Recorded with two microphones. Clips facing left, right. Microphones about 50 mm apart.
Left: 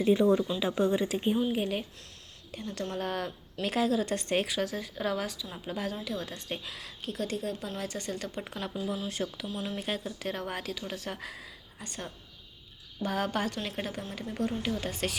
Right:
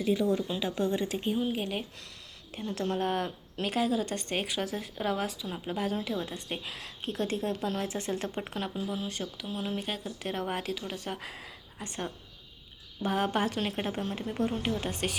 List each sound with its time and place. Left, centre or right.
0.0 s speech: left
0.6 s speech: centre
1.4 s speech: centre
2.5 s speech: centre
6.7 s speech: right
7.8 s speech: centre
8.6 s speech: centre
9.0 s speech: centre
9.5 s speech: centre
9.8 s speech: centre
11.9 s speech: right
14.1 s speech: right